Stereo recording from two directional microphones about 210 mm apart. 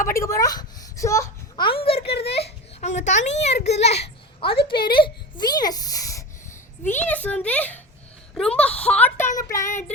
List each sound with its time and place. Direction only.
0.0 s a child's voice: 15° left (ahead or behind)
2.4 s a sound: 35° left (ahead or behind)
3.2 s a child's voice: 35° left (ahead or behind); by 9.9 s 15° left (ahead or behind)